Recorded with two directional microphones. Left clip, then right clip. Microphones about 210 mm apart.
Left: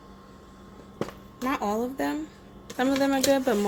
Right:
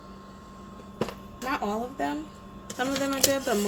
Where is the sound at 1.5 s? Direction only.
40° left (ahead or behind).